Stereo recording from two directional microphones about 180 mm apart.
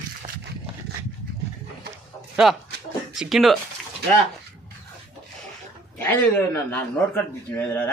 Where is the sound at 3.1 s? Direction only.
Centre (ahead or behind).